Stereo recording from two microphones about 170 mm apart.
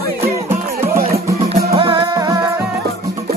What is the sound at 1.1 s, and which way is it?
Music, 65° right (ahead or behind).